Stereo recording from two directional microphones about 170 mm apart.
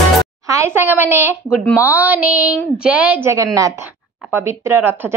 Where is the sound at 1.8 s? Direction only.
10° right (ahead or behind).